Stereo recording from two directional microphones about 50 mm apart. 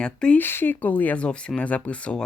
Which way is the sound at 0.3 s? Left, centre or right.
Left.